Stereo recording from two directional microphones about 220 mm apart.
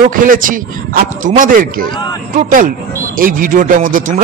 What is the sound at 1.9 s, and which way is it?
Speech, 20° left (ahead or behind).